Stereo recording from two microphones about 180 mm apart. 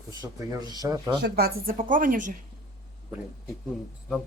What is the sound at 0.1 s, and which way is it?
Speech, 20° right (ahead or behind).